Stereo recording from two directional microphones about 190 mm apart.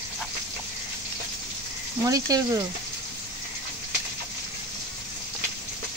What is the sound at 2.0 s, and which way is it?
Speech, 20° right (ahead or behind).